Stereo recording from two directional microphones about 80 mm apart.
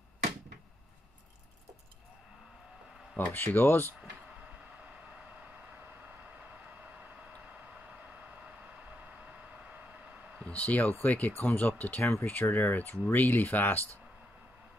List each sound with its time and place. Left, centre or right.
3.2 s speech: left
10.4 s speech: centre
12.0 s speech: left